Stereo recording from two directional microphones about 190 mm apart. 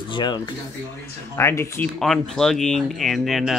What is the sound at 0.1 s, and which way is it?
Speech, 25° left (ahead or behind).